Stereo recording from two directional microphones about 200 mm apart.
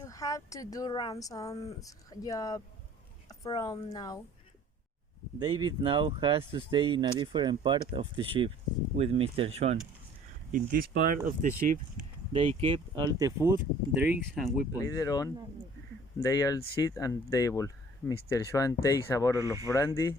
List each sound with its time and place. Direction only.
0.0 s speech: 15° left (ahead or behind)
5.4 s speech: 20° right (ahead or behind)
10.5 s speech: 45° right (ahead or behind)
12.3 s speech: 30° right (ahead or behind)
14.0 s speech: 5° right (ahead or behind)
14.8 s speech: 15° left (ahead or behind)